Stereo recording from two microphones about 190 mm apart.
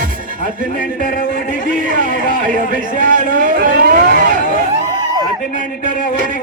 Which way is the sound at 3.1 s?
45° right (ahead or behind).